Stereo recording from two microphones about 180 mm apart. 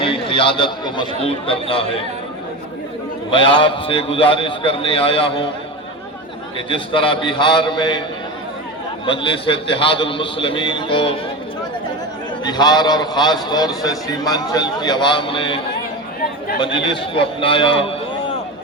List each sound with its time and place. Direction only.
0.0 s speech: 30° left (ahead or behind)
3.2 s a man's voice: 30° left (ahead or behind)
6.7 s a man's voice: 30° left (ahead or behind)
9.0 s a man's voice: 30° left (ahead or behind)
12.5 s a man's voice: 25° left (ahead or behind)